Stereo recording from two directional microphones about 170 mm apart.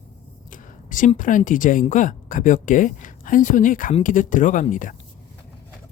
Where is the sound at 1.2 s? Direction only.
50° left (ahead or behind).